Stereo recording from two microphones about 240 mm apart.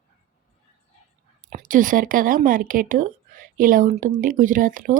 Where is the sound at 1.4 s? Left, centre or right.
Right.